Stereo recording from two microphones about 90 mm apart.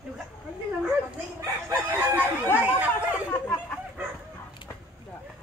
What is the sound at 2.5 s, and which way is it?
Speech, 15° right (ahead or behind).